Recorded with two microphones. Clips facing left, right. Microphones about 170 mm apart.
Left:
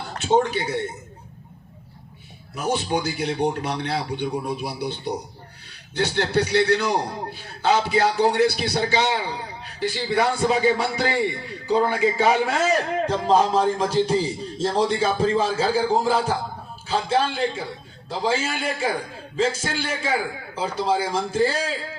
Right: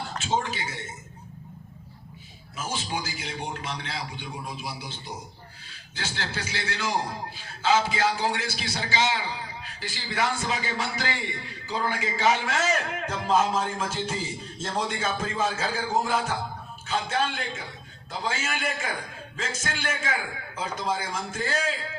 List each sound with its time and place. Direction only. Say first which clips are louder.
0.2 s a man's voice: left 9 dB; 60° left (ahead or behind)
2.6 s a man's voice: left 8 dB; 65° left (ahead or behind)
12.5 s a man's voice: left 5 dB; 35° left (ahead or behind)